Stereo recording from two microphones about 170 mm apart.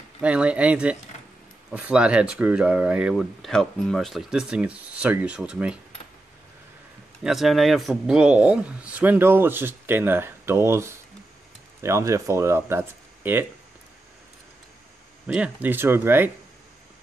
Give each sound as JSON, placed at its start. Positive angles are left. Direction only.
{"t": 0.2, "sound": "speech", "side_deg": -5}
{"t": 7.2, "sound": "speech", "side_deg": 0}
{"t": 15.2, "sound": "speech", "side_deg": -10}